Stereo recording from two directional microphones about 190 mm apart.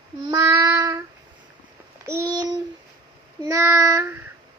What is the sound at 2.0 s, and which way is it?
Child singing, 15° right (ahead or behind).